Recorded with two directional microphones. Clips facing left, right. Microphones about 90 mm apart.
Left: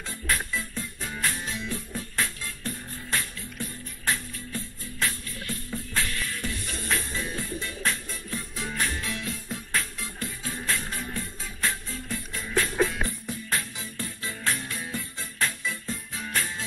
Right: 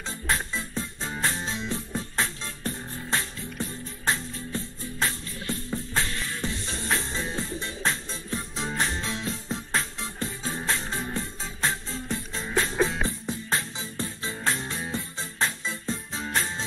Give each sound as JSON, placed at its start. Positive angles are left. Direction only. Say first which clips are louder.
{"t": 0.3, "sound": "music", "louder": "right 1 dB", "side_deg": -25}